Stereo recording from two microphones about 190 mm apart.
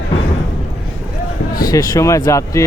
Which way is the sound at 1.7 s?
20° left (ahead or behind).